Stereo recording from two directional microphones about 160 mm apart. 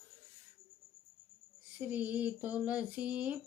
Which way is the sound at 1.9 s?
10° right (ahead or behind).